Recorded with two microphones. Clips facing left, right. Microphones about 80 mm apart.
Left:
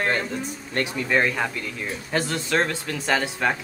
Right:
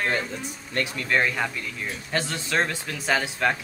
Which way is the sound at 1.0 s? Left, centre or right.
Centre.